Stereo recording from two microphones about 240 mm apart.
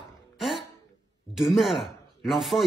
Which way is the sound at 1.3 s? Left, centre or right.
Centre.